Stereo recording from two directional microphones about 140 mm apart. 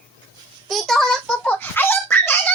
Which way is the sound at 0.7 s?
Centre (ahead or behind).